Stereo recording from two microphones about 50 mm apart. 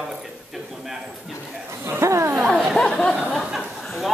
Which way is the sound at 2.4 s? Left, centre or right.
Centre.